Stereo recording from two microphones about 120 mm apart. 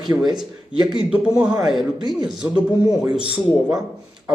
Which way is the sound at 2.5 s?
30° right (ahead or behind).